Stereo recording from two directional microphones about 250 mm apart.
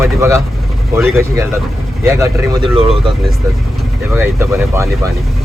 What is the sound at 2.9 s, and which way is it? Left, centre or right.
Speech, centre.